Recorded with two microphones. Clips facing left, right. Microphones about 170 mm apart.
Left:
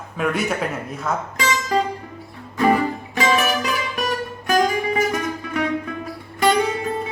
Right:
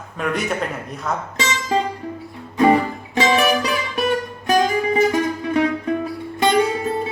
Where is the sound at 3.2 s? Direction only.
20° right (ahead or behind).